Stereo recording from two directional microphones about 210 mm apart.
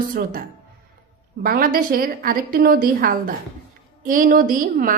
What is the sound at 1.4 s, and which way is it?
A woman's voice, 45° right (ahead or behind).